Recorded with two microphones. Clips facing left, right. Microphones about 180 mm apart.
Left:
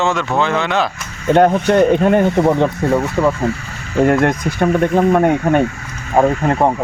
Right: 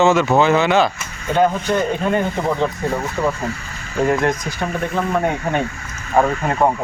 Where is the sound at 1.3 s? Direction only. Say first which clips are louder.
Left 5 dB; 70° left (ahead or behind).